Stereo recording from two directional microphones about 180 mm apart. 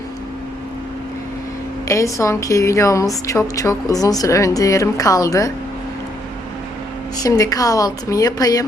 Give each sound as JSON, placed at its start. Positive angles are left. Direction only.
{"t": 1.9, "sound": "a woman's voice", "side_deg": 15}
{"t": 7.2, "sound": "a woman's voice", "side_deg": 20}